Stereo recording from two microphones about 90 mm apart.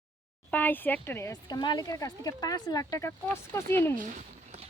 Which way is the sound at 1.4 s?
55° left (ahead or behind).